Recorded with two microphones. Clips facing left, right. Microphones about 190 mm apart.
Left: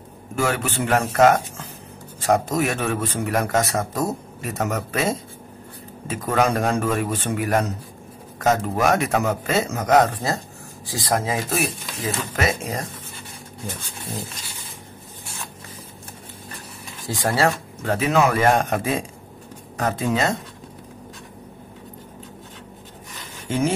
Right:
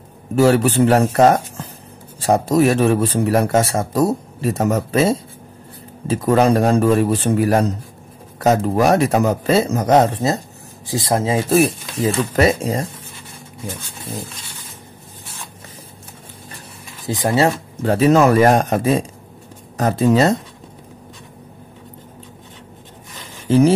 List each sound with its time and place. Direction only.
0.4 s a man's voice: 35° right (ahead or behind)
17.1 s speech: 20° right (ahead or behind)
17.8 s a man's voice: 35° right (ahead or behind)
23.5 s a man's voice: 35° right (ahead or behind)